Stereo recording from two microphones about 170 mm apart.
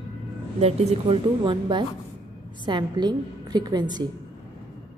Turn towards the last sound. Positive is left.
turn(degrees=-25)  # may be behind; listen again after turning